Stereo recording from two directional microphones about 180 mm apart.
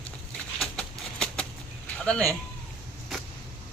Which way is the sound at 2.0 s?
5° left (ahead or behind).